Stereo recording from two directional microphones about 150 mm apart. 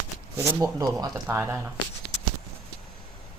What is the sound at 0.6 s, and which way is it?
Speech, 25° right (ahead or behind).